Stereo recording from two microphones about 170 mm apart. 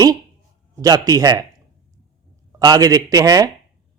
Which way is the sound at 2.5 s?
20° right (ahead or behind).